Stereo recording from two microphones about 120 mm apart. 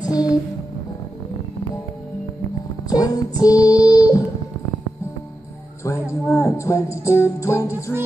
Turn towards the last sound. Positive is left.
turn(degrees=25)  # may be behind; listen again after turning